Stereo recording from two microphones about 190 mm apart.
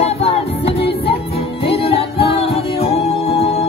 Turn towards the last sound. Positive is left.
turn(degrees=30)  # may be behind; listen again after turning